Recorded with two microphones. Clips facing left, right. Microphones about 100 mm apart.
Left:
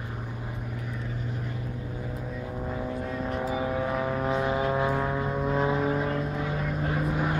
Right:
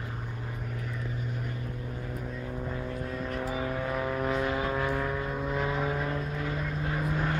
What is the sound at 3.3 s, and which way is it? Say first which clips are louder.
Vehicle: left 4 dB; 20° left (ahead or behind).